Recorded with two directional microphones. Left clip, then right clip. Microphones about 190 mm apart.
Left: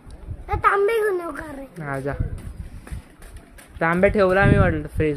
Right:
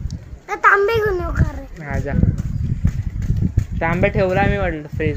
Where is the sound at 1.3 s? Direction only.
15° left (ahead or behind).